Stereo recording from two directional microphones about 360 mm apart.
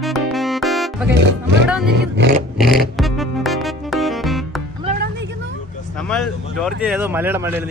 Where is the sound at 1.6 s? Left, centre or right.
Centre.